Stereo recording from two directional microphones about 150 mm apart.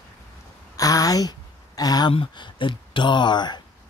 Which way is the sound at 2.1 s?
35° left (ahead or behind).